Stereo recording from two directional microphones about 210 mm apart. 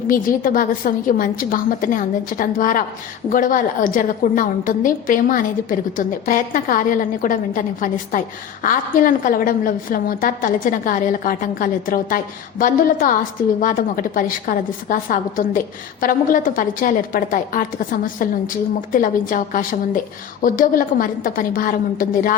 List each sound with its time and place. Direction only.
0.1 s a woman's voice: 40° left (ahead or behind)